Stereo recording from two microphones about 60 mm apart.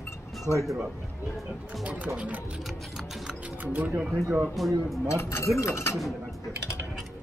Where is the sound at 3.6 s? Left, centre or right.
Right.